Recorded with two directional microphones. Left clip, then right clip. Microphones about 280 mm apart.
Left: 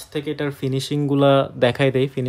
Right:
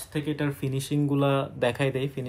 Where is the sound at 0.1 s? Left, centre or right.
Left.